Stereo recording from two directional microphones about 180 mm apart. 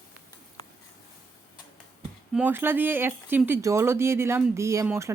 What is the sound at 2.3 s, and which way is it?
Speech, 10° right (ahead or behind).